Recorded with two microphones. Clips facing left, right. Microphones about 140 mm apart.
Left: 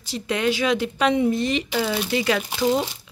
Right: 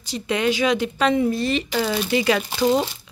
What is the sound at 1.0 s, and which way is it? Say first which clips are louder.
Speech: left 1 dB; 15° left (ahead or behind).